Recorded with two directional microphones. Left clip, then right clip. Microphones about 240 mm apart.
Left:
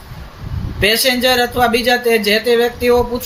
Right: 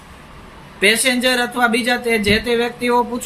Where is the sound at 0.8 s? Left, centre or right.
Centre.